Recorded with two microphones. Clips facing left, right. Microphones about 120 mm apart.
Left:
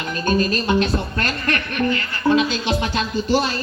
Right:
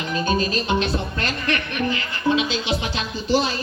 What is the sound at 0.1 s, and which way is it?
A man's voice, 50° left (ahead or behind).